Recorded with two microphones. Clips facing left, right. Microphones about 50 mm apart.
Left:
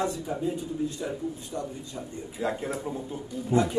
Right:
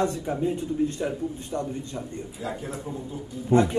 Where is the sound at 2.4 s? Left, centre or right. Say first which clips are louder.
Left 4 dB; left.